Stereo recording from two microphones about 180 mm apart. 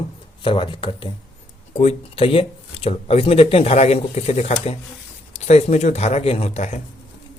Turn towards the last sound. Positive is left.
turn(degrees=40)  # may be behind; listen again after turning